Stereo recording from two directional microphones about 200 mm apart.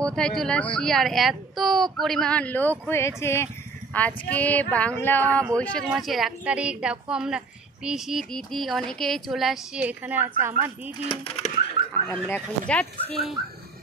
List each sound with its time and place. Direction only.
0.0 s a woman's voice: 5° left (ahead or behind)
2.9 s child singing: 15° left (ahead or behind)
5.9 s a woman's voice: centre (ahead or behind)
11.1 s speech: 30° left (ahead or behind)
12.1 s a woman's voice: 5° left (ahead or behind)